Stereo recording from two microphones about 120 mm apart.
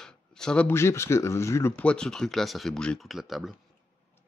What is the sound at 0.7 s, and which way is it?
Speech, 20° left (ahead or behind).